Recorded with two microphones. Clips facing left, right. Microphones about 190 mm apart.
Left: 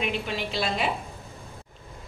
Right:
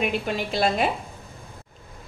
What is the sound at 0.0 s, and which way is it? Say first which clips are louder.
Speech: right 4 dB; 45° right (ahead or behind).